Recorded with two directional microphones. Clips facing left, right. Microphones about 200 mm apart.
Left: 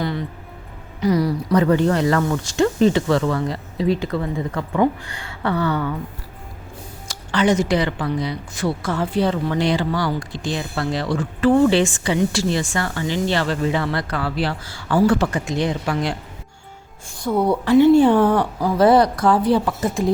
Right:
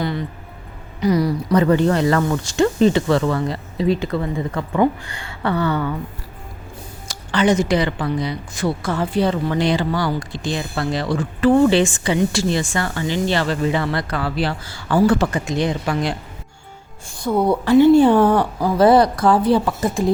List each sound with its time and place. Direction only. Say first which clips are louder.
1.0 s speech: right 1 dB; 15° right (ahead or behind)
7.1 s speech: right 1 dB; 20° right (ahead or behind)
17.2 s speech: right 1 dB; 25° right (ahead or behind)
17.7 s a woman's voice: right 1 dB; 35° right (ahead or behind)